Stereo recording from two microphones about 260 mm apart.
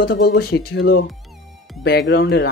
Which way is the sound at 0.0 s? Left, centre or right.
Left.